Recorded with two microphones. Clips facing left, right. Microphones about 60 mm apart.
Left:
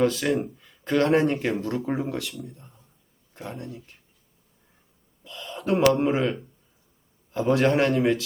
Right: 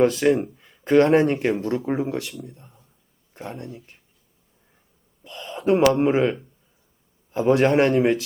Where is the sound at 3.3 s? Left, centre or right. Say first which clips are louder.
Right 2 dB; centre.